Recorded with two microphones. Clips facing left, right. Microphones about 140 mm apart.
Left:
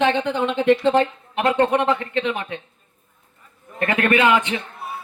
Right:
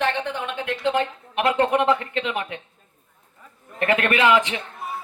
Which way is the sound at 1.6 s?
25° left (ahead or behind).